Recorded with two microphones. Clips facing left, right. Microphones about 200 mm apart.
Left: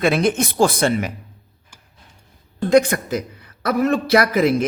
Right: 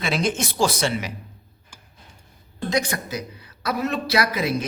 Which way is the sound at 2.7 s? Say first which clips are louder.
Left 10 dB; 55° left (ahead or behind).